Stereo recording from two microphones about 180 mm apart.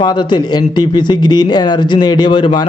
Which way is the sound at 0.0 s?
25° left (ahead or behind).